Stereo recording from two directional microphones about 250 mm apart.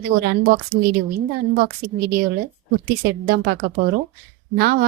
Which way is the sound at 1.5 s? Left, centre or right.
Right.